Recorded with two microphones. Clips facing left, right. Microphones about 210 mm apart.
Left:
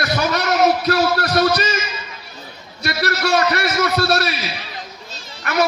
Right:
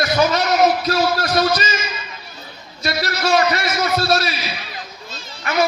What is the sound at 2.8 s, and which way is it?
A man's voice, 60° left (ahead or behind).